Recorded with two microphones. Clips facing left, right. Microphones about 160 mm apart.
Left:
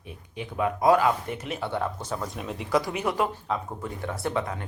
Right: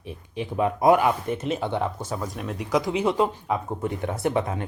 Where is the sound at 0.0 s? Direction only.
25° right (ahead or behind); by 2.6 s centre (ahead or behind).